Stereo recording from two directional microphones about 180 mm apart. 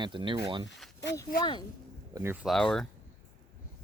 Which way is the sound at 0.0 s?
25° right (ahead or behind).